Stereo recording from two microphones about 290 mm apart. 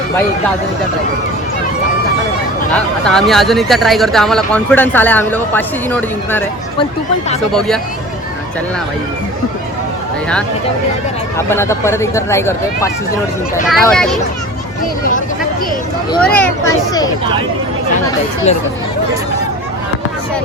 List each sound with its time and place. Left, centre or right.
2.7 s speech: centre
11.3 s speech: centre
16.2 s speech: centre
18.5 s speech: left